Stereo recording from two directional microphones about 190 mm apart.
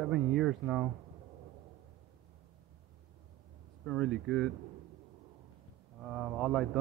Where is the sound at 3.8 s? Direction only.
5° left (ahead or behind).